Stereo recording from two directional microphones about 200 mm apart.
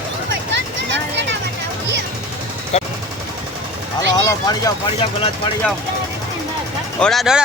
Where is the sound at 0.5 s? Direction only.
60° right (ahead or behind).